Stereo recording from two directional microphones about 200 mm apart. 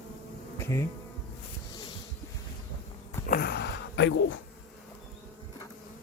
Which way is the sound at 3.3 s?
55° left (ahead or behind).